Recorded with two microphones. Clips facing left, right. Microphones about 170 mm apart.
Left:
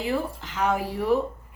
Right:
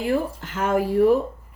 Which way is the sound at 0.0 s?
50° right (ahead or behind).